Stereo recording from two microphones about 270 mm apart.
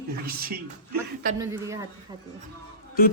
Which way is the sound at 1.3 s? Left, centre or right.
Centre.